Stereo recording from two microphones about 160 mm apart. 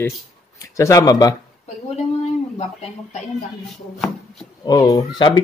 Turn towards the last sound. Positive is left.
turn(degrees=25)  # may be behind; listen again after turning